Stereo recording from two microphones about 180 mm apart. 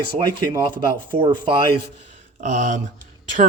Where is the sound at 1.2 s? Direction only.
25° right (ahead or behind).